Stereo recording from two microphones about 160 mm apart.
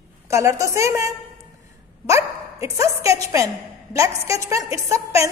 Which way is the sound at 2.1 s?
20° right (ahead or behind).